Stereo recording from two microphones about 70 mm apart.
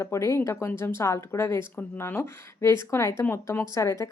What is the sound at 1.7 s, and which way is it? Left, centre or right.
A woman's voice, left.